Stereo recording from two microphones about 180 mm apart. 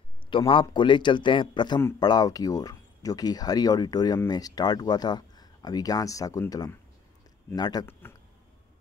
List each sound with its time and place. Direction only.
0.3 s speech: 30° left (ahead or behind)